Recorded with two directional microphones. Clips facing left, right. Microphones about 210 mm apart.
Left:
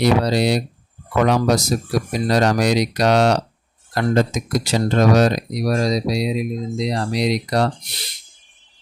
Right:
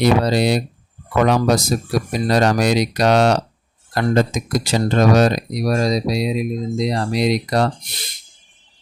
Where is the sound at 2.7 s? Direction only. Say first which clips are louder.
Right 1 dB; 50° right (ahead or behind).